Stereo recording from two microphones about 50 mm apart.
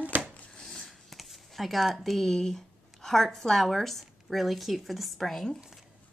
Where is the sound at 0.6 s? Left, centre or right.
Centre.